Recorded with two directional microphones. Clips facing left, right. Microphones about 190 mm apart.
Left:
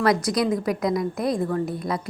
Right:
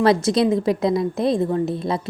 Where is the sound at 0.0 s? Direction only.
25° right (ahead or behind).